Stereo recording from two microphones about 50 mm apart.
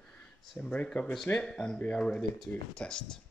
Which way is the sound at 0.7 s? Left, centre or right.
Left.